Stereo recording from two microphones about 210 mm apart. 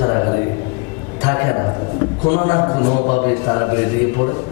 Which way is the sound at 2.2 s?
35° left (ahead or behind).